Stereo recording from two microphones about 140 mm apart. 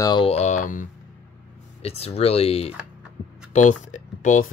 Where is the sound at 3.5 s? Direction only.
60° left (ahead or behind).